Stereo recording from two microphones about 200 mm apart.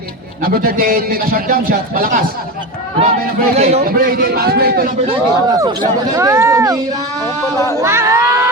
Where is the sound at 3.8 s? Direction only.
45° right (ahead or behind).